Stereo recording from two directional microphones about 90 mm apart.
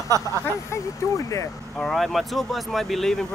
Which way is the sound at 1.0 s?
35° left (ahead or behind).